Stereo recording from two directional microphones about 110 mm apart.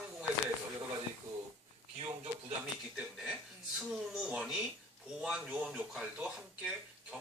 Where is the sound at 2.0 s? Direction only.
55° right (ahead or behind).